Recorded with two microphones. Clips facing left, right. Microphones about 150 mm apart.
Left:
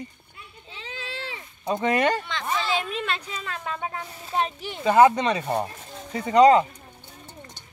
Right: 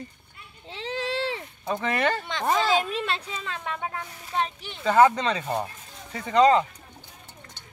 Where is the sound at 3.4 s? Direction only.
5° left (ahead or behind).